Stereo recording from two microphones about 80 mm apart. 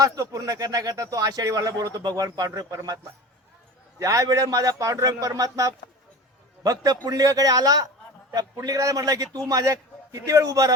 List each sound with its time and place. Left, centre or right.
0.0 s speech: right
4.0 s a man's voice: right